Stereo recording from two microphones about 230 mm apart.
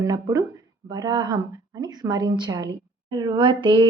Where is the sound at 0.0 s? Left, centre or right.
Centre.